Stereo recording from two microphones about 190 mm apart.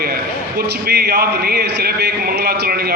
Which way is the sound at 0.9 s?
55° right (ahead or behind).